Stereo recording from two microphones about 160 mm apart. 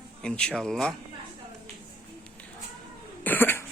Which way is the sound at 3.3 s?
10° left (ahead or behind).